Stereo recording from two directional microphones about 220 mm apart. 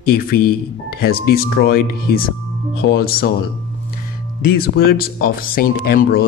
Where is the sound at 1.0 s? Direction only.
45° left (ahead or behind).